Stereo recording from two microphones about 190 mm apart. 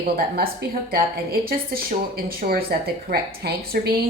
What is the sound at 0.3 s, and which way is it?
A woman's voice, 50° right (ahead or behind).